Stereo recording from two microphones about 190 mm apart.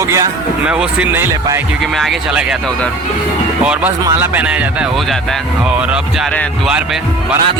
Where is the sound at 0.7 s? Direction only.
5° right (ahead or behind).